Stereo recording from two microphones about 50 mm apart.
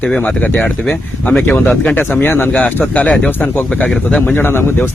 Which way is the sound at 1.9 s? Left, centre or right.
Left.